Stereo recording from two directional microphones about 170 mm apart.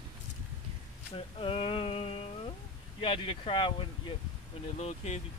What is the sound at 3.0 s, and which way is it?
Speech, 30° left (ahead or behind).